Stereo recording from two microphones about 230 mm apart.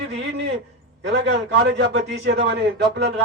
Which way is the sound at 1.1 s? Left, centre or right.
Right.